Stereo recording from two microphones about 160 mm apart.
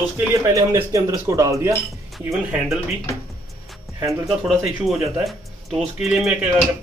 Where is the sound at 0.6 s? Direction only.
20° right (ahead or behind).